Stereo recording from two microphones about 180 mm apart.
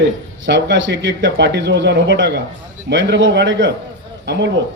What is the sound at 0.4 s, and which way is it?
Speech, 90° right.